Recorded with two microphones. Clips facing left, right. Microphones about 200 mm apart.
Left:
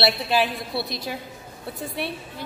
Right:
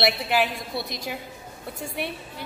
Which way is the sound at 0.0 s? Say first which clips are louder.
Left 1 dB; 15° right (ahead or behind).